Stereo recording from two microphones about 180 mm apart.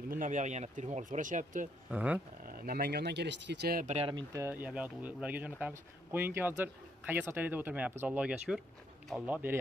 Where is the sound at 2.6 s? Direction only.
60° right (ahead or behind); by 4.0 s 45° right (ahead or behind).